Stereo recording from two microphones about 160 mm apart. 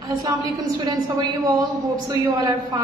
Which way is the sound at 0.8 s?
25° right (ahead or behind).